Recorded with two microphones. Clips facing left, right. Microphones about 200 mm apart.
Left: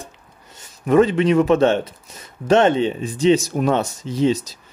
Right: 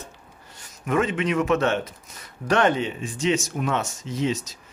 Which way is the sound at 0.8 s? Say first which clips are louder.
Left 8 dB; 35° left (ahead or behind).